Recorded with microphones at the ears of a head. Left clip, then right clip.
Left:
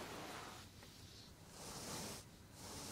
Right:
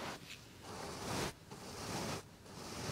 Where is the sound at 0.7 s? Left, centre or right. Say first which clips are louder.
Right 17 dB; right.